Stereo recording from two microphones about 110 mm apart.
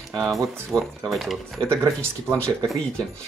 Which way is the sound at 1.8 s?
25° right (ahead or behind).